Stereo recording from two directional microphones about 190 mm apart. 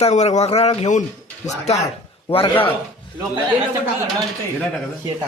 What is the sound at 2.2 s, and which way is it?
Speech, 25° left (ahead or behind).